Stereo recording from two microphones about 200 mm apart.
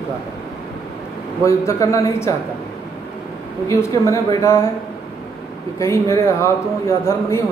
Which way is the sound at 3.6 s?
15° left (ahead or behind).